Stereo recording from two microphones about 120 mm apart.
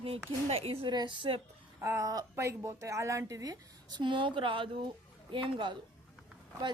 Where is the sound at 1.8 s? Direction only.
25° right (ahead or behind).